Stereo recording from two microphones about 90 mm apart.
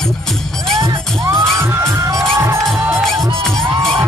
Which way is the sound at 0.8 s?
35° right (ahead or behind).